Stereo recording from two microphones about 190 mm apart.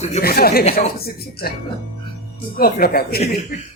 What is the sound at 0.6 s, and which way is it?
Speech, 35° left (ahead or behind).